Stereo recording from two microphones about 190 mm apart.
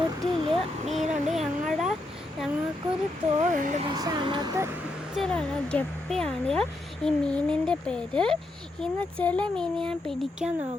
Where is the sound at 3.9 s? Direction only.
20° right (ahead or behind).